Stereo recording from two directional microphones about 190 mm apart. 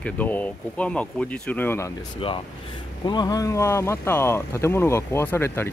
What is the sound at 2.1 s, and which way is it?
Speech, 30° left (ahead or behind).